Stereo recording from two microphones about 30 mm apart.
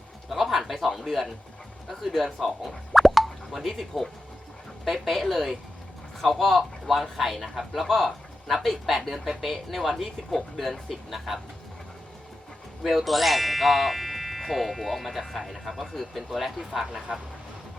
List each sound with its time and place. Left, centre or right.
0.3 s a sound: centre
1.9 s a man's voice: centre
7.9 s a man's voice: centre
13.1 s speech: centre